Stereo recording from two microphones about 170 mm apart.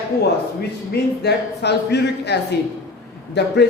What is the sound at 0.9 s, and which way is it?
Speech, 75° left (ahead or behind).